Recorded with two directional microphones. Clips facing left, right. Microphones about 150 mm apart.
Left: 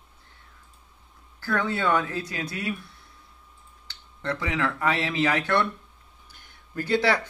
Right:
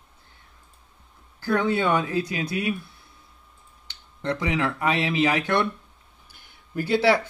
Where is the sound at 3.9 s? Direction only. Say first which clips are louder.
Right 3 dB; 15° right (ahead or behind).